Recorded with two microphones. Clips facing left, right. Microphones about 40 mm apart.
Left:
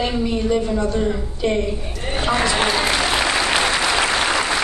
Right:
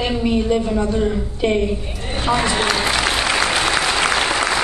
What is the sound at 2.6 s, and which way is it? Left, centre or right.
Applause, centre.